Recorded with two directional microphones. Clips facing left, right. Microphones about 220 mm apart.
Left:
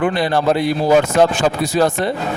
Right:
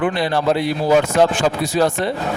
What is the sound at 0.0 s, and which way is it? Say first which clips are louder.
Speech: left 2 dB; 45° left (ahead or behind).